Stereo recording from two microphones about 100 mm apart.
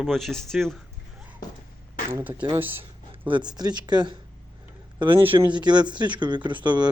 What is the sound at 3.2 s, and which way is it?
Speech, 50° right (ahead or behind).